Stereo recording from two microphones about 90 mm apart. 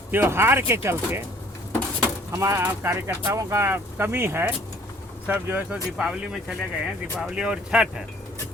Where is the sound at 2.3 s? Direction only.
30° right (ahead or behind).